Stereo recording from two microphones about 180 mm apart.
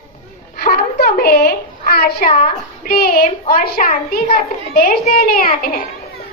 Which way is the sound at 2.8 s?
55° left (ahead or behind).